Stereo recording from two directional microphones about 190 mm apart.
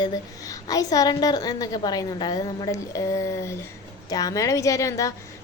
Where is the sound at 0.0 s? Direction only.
20° left (ahead or behind).